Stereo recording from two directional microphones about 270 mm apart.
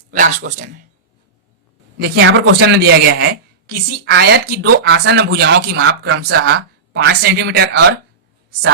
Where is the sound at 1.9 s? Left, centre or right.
Right.